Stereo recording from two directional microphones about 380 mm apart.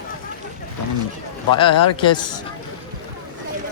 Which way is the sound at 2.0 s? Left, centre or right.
Centre.